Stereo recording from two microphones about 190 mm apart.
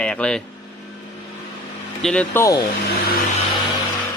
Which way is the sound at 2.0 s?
5° left (ahead or behind).